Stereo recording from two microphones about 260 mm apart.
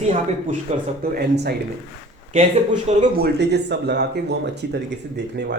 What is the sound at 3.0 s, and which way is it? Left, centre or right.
Speech, right.